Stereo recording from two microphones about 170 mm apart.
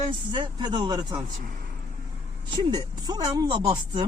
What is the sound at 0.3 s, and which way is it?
Speech, 25° right (ahead or behind).